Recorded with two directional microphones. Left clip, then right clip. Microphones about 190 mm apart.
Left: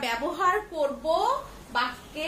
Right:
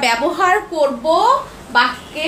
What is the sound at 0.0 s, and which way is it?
Speech, 15° right (ahead or behind).